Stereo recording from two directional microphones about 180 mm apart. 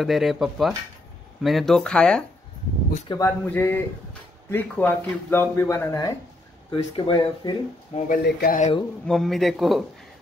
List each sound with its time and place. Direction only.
0.0 s a man's voice: centre (ahead or behind)
3.1 s speech: 15° left (ahead or behind)
8.1 s speech: 55° left (ahead or behind)
9.0 s a man's voice: centre (ahead or behind)